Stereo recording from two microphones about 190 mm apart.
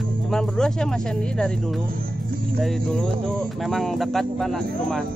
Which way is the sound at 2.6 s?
5° left (ahead or behind).